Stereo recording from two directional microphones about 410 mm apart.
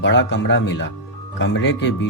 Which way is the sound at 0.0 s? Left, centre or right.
Left.